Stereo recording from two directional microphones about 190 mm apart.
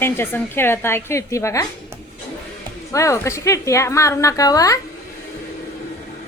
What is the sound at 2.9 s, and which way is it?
A woman's voice, 15° left (ahead or behind).